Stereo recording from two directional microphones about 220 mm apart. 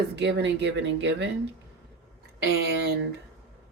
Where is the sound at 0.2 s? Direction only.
50° right (ahead or behind).